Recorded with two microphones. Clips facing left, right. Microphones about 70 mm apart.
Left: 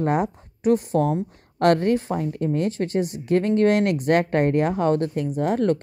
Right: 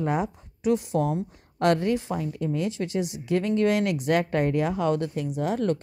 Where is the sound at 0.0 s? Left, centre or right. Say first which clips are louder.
Left 4 dB; left.